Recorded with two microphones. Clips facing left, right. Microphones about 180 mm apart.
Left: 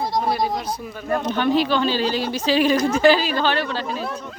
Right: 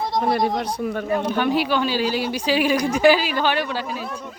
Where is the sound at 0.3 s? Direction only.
60° right (ahead or behind).